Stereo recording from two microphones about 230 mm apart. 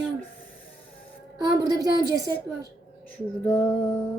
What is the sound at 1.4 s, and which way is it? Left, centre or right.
Speech, centre.